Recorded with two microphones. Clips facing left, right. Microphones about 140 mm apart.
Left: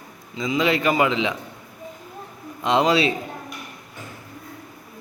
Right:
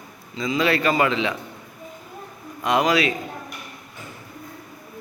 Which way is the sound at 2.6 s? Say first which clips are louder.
Left 1 dB; 25° left (ahead or behind).